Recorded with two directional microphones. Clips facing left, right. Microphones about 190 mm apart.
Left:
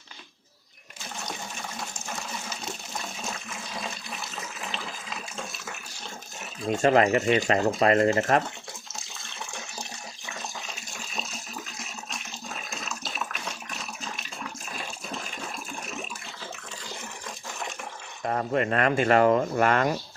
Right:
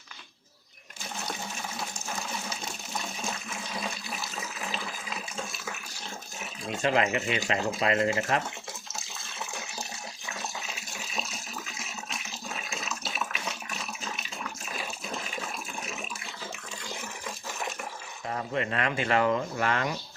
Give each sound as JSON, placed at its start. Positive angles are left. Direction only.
{"t": 6.7, "sound": "speech", "side_deg": 45}
{"t": 10.7, "sound": "water", "side_deg": -5}
{"t": 18.3, "sound": "speech", "side_deg": 50}